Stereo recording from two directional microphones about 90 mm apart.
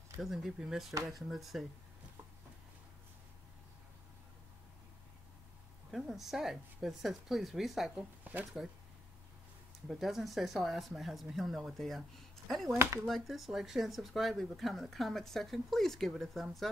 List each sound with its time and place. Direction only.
0.2 s speech: 5° right (ahead or behind)
5.9 s speech: centre (ahead or behind)
8.2 s speech: 20° right (ahead or behind)
9.8 s speech: centre (ahead or behind)